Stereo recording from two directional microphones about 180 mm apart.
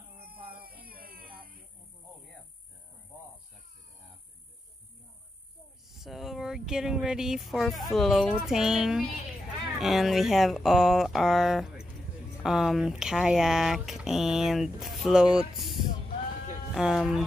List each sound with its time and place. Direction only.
0.6 s music: 55° right (ahead or behind)
5.9 s speech: centre (ahead or behind)